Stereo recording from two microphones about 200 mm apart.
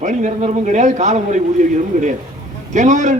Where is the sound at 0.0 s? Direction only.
40° right (ahead or behind).